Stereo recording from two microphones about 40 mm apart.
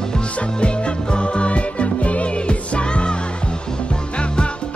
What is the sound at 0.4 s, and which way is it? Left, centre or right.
Music, left.